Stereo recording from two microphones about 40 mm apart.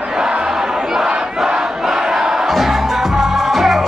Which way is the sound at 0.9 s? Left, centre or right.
Centre.